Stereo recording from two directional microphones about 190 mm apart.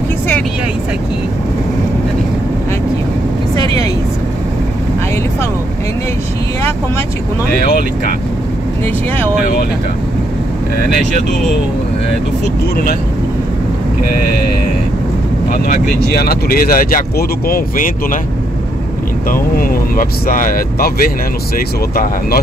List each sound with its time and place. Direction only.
15.5 s speech: 45° left (ahead or behind)
19.3 s speech: 50° left (ahead or behind)